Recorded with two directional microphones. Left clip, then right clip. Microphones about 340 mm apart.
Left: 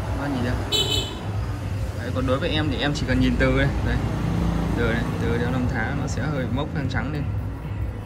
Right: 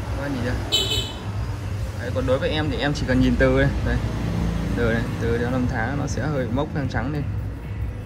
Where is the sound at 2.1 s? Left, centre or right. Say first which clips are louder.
Right 2 dB; centre.